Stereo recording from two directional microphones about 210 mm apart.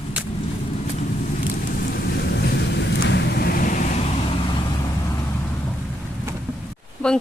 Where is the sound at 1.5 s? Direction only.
45° left (ahead or behind).